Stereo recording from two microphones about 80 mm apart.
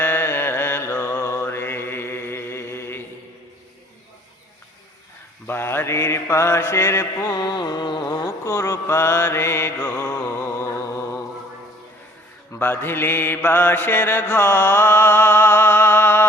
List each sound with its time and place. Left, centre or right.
0.0 s mantra: left
5.5 s mantra: left
7.3 s mantra: left
12.5 s mantra: left